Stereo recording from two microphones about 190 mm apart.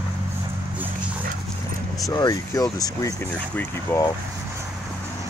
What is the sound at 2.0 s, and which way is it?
Speech, 20° left (ahead or behind).